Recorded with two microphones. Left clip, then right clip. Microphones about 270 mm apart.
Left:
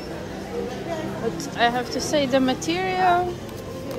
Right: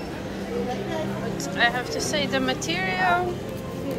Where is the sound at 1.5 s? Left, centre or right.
Left.